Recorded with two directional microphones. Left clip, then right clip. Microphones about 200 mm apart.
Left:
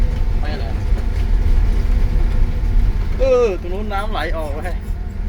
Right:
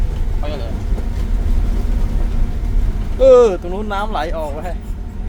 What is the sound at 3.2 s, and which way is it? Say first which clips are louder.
Speech: right 6 dB; 35° right (ahead or behind).